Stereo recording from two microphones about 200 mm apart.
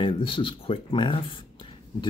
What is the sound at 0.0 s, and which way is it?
Speech, 25° left (ahead or behind).